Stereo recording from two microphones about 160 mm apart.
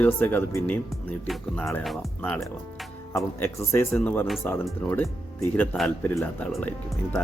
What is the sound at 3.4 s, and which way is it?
Speech, 15° left (ahead or behind).